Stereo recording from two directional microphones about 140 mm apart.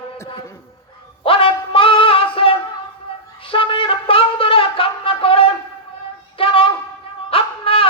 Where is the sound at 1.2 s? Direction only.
40° left (ahead or behind).